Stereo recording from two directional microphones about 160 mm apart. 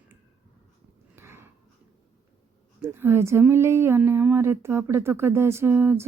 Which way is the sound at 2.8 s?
15° right (ahead or behind).